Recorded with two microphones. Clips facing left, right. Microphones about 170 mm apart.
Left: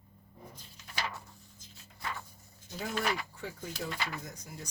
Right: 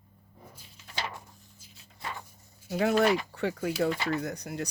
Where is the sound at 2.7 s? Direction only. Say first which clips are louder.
Right 11 dB; 70° right (ahead or behind).